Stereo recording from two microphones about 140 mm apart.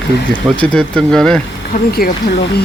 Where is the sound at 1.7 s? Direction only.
90° left.